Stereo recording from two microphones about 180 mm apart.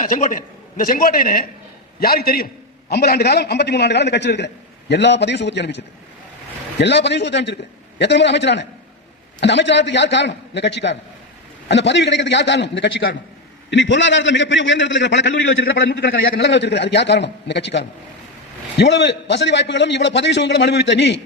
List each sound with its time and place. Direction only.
0.0 s a man's voice: 45° left (ahead or behind); by 13.1 s 70° left (ahead or behind)
13.7 s a man's voice: 85° left